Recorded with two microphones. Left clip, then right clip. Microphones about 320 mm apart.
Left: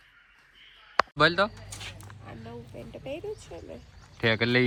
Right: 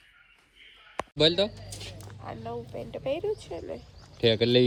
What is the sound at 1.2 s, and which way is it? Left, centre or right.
Speech, centre.